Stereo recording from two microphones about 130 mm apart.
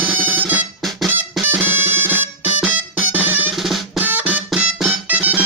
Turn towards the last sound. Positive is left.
turn(degrees=-10)  # may be behind; listen again after turning